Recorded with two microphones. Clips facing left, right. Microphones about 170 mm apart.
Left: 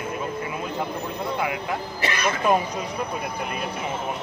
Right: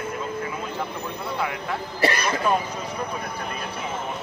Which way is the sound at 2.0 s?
35° right (ahead or behind).